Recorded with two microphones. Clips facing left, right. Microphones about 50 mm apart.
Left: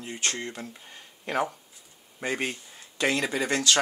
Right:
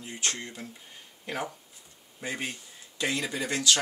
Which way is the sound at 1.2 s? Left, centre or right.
Left.